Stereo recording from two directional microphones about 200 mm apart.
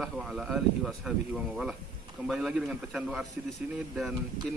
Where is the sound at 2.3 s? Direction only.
5° right (ahead or behind).